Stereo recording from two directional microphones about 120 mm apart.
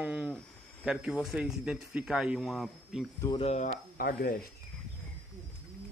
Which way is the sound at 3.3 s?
65° left (ahead or behind).